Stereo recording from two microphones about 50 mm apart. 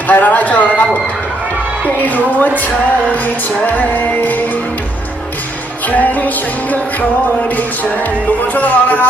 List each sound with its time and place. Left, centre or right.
0.1 s music: left
2.0 s music: left
3.7 s music: left
5.9 s music: left
8.5 s music: left